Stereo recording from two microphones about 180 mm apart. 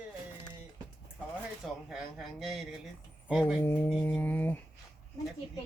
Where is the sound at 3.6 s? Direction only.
10° left (ahead or behind).